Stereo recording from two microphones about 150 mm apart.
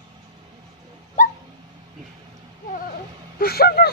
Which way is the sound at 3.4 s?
90° left.